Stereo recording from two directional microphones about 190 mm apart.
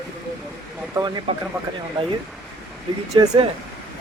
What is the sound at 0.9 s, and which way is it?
Speech, 20° right (ahead or behind).